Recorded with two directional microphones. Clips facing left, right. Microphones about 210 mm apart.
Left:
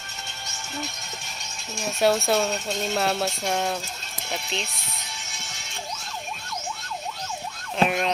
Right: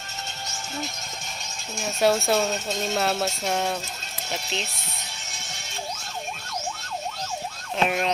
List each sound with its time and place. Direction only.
1.7 s speech: centre (ahead or behind)
7.8 s speech: centre (ahead or behind)